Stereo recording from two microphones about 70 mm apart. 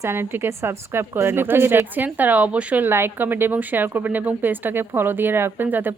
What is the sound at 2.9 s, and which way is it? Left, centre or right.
Speech, right.